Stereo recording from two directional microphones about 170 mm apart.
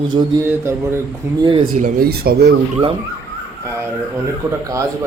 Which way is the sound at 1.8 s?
60° right (ahead or behind).